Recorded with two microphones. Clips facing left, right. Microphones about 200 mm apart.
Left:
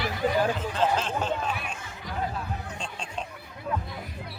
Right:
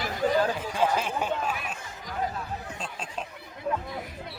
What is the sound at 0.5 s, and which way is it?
Speech, 10° right (ahead or behind).